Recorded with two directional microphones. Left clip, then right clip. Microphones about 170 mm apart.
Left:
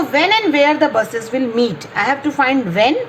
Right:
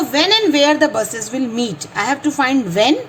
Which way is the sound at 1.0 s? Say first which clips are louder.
Left 3 dB; 35° right (ahead or behind).